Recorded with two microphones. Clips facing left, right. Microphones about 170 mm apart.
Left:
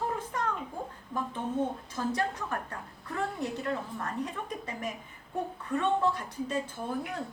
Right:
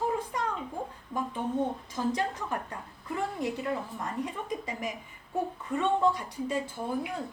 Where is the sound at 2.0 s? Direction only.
15° right (ahead or behind).